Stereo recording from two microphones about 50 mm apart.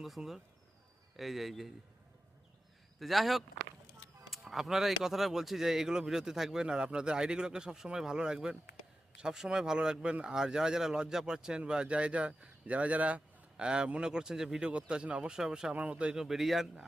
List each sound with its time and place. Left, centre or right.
0.0 s speech: centre
3.0 s speech: centre
14.7 s speech: right
15.7 s speech: right
16.1 s speech: centre